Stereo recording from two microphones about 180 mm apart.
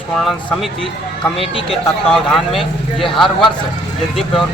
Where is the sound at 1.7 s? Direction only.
Centre (ahead or behind).